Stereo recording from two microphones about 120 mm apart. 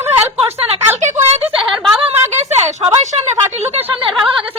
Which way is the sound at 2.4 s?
70° right (ahead or behind).